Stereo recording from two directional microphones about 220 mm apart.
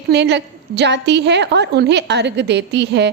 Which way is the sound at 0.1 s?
50° right (ahead or behind).